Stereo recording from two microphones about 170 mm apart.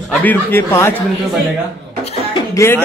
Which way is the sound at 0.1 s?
10° left (ahead or behind).